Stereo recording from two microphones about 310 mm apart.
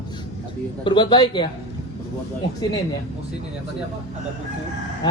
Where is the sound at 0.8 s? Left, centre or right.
Centre.